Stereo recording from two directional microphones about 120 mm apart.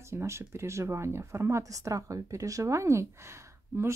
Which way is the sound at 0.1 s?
20° right (ahead or behind).